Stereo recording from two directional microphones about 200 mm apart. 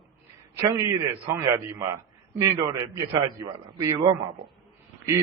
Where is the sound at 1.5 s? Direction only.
15° right (ahead or behind).